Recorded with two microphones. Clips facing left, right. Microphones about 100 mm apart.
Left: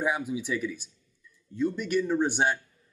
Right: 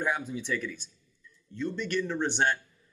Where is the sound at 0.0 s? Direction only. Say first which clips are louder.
Left 2 dB; 10° left (ahead or behind).